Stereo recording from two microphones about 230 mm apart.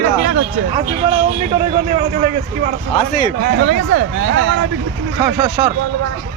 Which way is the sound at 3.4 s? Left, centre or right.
Right.